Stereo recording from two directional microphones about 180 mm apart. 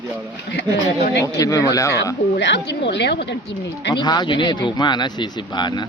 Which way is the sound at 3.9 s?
25° left (ahead or behind).